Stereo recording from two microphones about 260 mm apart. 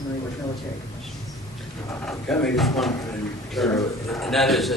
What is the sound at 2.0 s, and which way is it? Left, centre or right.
A man's voice, centre.